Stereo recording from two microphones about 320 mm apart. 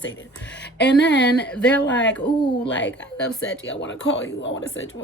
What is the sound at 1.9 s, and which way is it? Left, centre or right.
Speech, left.